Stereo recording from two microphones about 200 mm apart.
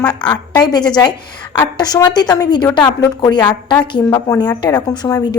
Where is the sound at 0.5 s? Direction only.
20° left (ahead or behind).